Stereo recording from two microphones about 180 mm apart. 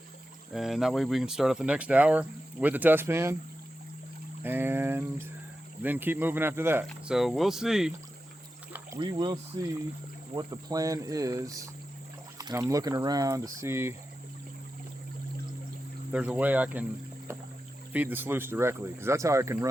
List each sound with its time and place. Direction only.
0.5 s speech: centre (ahead or behind)
4.4 s speech: 10° right (ahead or behind)
7.2 s speech: centre (ahead or behind)
9.0 s speech: 25° right (ahead or behind)
16.1 s speech: 5° right (ahead or behind)
17.9 s speech: 10° right (ahead or behind)